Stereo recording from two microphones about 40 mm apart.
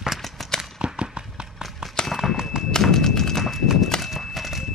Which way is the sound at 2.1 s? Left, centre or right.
Centre.